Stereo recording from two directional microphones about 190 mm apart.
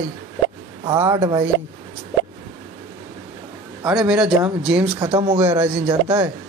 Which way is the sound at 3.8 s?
5° right (ahead or behind).